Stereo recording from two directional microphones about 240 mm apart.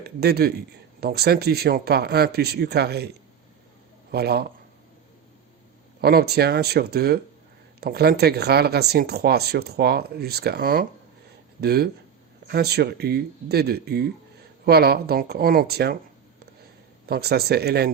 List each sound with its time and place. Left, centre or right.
0.0 s speech: right
4.1 s speech: right
6.0 s speech: right
17.1 s speech: right